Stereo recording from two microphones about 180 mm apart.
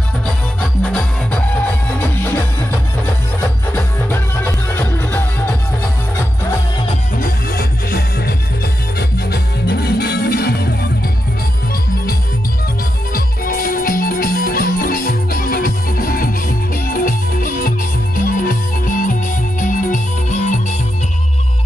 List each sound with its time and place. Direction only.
0.6 s music: 5° left (ahead or behind)
7.2 s music: 55° left (ahead or behind)
13.1 s music: 55° left (ahead or behind)